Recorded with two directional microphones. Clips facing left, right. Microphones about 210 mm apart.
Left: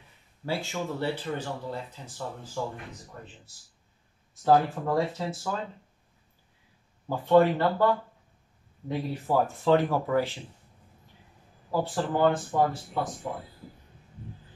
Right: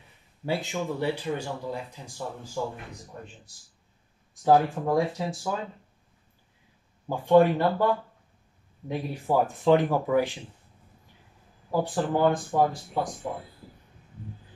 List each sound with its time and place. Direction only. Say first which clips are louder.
0.5 s speech: right 2 dB; 15° right (ahead or behind)
4.5 s speech: right 1 dB; 15° right (ahead or behind)
7.1 s speech: right 1 dB; 15° right (ahead or behind)
11.7 s speech: right 2 dB; 15° right (ahead or behind)